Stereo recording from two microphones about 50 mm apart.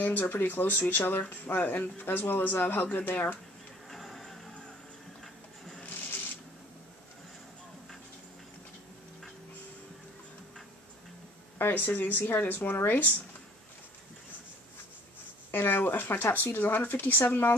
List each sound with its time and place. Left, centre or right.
0.0 s speech: left
3.9 s music: centre
5.2 s printer: centre
11.5 s speech: left
15.5 s speech: left